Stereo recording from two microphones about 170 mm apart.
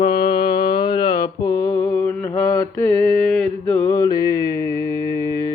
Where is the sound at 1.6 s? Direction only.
15° left (ahead or behind).